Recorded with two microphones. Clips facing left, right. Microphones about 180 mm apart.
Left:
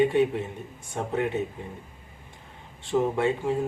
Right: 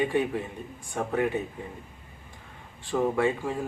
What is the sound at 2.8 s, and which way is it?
Speech, 20° left (ahead or behind).